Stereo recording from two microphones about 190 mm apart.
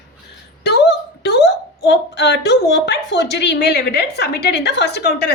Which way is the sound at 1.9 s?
65° left (ahead or behind).